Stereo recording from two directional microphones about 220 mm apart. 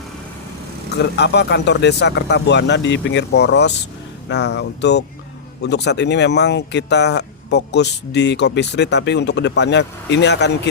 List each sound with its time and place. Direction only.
0.9 s speech: 50° left (ahead or behind)